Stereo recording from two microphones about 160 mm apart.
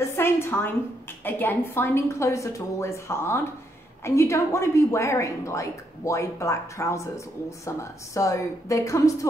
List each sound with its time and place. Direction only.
0.1 s a woman's voice: 15° left (ahead or behind)